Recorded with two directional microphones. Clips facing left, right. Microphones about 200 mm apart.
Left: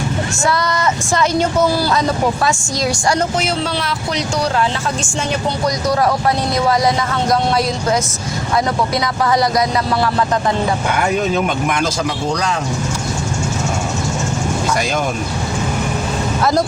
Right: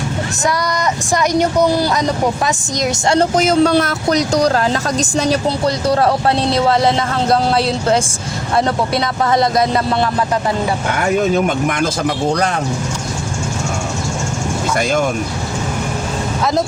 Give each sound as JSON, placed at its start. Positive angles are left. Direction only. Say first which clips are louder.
{"t": 1.1, "sound": "a woman's voice", "louder": "right 2 dB", "side_deg": -15}
{"t": 3.2, "sound": "speech", "louder": "right 6 dB", "side_deg": -40}
{"t": 9.2, "sound": "speech", "louder": "right 1 dB", "side_deg": -25}
{"t": 11.2, "sound": "speech", "louder": "right 2 dB", "side_deg": -50}
{"t": 14.8, "sound": "speech", "louder": "right 3 dB", "side_deg": -50}
{"t": 16.4, "sound": "speech", "louder": "left 1 dB", "side_deg": 0}